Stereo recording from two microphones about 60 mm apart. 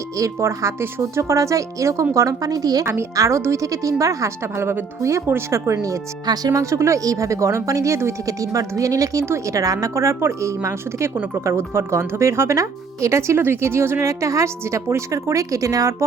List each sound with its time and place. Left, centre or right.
0.2 s speech: right
2.1 s a woman's voice: right
2.8 s speech: right
5.7 s speech: right
8.3 s speech: right
9.2 s speech: right
11.4 s speech: right
14.1 s speech: right